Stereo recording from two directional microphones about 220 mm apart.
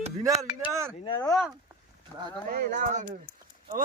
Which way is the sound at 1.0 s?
20° left (ahead or behind).